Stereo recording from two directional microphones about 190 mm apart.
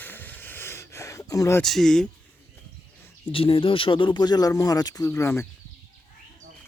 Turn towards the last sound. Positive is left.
turn(degrees=15)  # may be behind; listen again after turning